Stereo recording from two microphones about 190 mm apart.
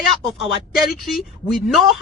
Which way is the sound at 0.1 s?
Centre (ahead or behind).